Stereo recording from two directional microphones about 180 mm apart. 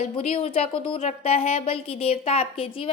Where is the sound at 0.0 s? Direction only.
35° left (ahead or behind).